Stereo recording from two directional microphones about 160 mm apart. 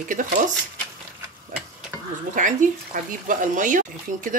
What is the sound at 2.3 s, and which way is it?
Speech, 55° right (ahead or behind).